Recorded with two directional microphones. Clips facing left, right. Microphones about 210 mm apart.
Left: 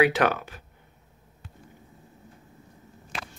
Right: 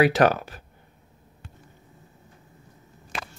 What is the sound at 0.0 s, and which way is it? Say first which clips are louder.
Speech: right 3 dB; 40° right (ahead or behind).